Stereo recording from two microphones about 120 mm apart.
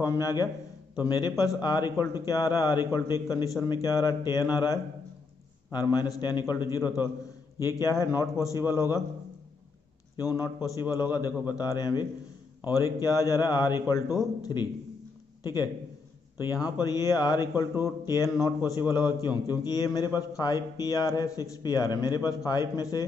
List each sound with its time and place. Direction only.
0.0 s a man's voice: 30° left (ahead or behind)
10.1 s a man's voice: 30° left (ahead or behind)